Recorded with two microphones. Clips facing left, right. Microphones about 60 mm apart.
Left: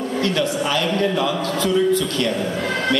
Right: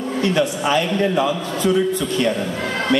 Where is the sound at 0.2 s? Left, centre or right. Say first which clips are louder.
Right 3 dB; centre.